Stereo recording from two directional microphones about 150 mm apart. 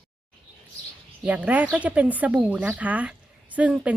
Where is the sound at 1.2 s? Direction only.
10° right (ahead or behind).